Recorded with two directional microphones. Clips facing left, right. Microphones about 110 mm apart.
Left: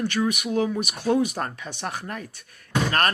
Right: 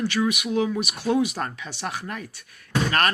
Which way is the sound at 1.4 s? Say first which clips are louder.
Even; 45° left (ahead or behind).